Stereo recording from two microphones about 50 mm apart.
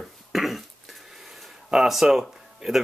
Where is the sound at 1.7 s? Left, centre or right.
Centre.